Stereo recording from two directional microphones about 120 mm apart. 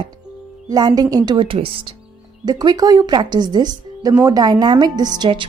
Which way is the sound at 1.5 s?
50° right (ahead or behind).